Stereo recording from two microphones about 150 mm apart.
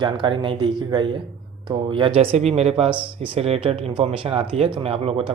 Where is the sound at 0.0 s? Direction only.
30° right (ahead or behind).